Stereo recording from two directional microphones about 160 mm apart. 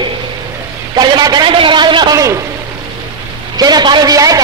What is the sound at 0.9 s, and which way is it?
A man's voice, 25° right (ahead or behind).